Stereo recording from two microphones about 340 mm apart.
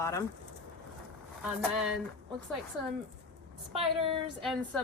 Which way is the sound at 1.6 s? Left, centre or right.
Centre.